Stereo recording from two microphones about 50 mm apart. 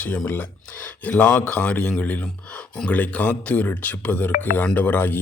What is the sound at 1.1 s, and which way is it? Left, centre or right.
Speech, centre.